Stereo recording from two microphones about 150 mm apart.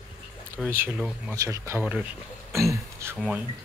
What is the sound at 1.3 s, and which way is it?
Speech, 20° right (ahead or behind).